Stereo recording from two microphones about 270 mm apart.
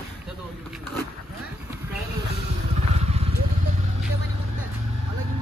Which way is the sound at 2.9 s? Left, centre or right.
Right.